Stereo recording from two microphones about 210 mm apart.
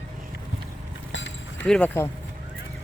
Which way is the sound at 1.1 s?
65° left (ahead or behind).